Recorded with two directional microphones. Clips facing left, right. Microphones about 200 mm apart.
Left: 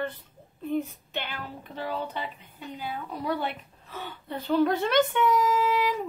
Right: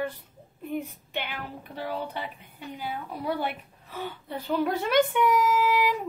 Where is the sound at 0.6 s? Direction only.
15° right (ahead or behind).